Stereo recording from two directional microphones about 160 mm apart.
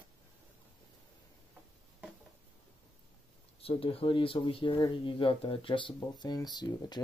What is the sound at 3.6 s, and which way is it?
Speech, 35° left (ahead or behind).